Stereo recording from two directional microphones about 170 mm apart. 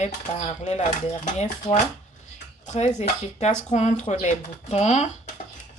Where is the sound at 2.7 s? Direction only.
40° left (ahead or behind).